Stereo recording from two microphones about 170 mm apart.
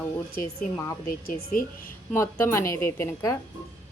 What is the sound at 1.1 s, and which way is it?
Speech, 60° left (ahead or behind).